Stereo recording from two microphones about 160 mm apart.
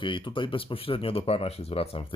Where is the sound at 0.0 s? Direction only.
30° left (ahead or behind).